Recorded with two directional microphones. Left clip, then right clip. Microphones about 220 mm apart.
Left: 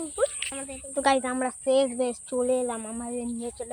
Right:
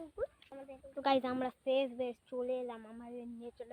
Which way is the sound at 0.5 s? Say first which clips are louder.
Left 12 dB; 25° right (ahead or behind).